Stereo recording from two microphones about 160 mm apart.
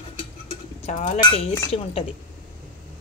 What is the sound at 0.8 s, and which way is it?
Speech, 45° left (ahead or behind).